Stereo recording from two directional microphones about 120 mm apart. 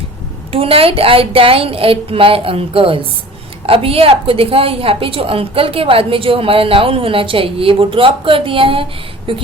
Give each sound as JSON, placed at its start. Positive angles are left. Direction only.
{"t": 0.5, "sound": "a woman's voice", "side_deg": -50}